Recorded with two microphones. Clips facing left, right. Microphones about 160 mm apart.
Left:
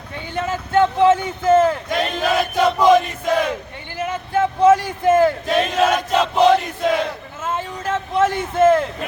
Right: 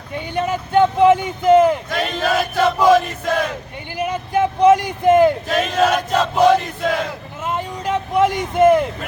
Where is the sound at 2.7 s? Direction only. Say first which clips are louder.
Even; 5° right (ahead or behind).